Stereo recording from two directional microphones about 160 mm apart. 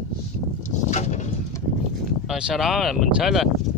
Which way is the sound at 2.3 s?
5° right (ahead or behind).